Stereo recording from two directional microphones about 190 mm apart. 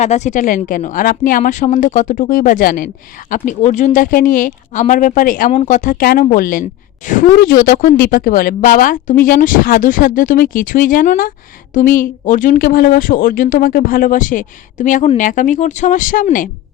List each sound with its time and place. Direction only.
0.0 s speech: 35° left (ahead or behind)